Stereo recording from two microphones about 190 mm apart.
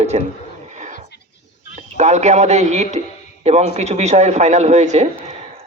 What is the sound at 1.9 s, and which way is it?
A man's voice, 35° right (ahead or behind).